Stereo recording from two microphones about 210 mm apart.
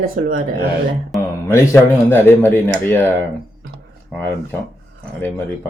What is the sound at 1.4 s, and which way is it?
Speech, 10° left (ahead or behind).